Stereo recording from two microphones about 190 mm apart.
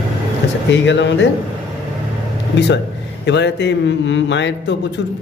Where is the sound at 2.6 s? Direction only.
65° left (ahead or behind).